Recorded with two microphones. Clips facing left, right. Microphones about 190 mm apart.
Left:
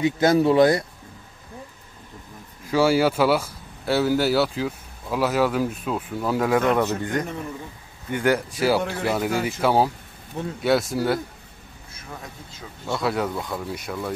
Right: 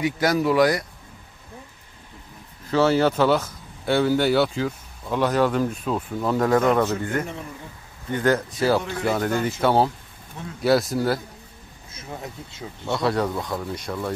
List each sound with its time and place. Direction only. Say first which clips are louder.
0.0 s speech: left 3 dB; 25° left (ahead or behind)
2.7 s speech: even; 10° left (ahead or behind)
12.8 s speech: right 2 dB; 5° left (ahead or behind)